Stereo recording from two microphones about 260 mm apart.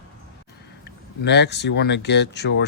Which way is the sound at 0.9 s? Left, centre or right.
Left.